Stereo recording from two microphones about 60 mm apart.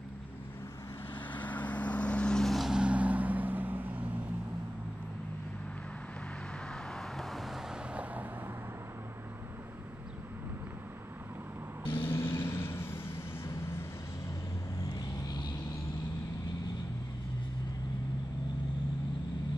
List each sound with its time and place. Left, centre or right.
1.3 s vehicle: left
2.4 s vehicle: centre
2.7 s music: centre
6.7 s vehicle: centre
7.9 s vehicle: right
11.9 s vehicle: left